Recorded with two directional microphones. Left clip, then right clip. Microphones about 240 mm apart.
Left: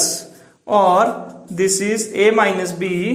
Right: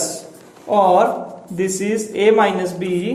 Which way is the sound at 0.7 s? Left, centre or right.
Left.